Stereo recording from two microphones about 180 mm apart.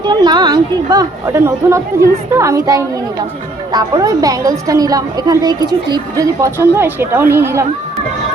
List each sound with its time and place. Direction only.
0.1 s a woman's voice: 25° right (ahead or behind)